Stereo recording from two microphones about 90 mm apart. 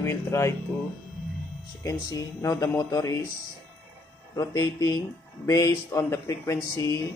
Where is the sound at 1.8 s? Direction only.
45° left (ahead or behind).